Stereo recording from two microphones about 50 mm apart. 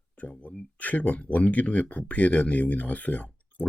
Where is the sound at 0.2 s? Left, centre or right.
Left.